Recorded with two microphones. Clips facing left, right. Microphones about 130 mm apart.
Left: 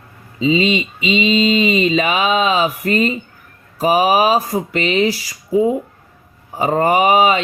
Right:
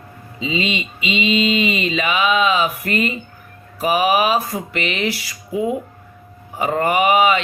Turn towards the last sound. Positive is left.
turn(degrees=35)  # may be behind; listen again after turning